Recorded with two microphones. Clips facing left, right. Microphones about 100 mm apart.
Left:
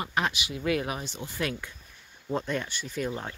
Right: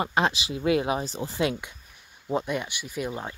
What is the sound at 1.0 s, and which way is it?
Speech, 35° right (ahead or behind).